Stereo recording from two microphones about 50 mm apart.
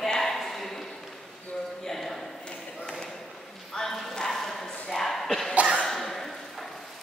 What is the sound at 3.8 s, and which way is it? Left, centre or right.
Dog, centre.